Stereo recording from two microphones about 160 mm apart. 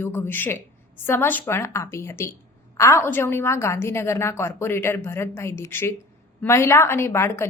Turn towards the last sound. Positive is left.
turn(degrees=15)  # may be behind; listen again after turning